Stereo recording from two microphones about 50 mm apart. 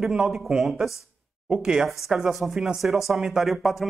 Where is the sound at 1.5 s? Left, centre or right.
Centre.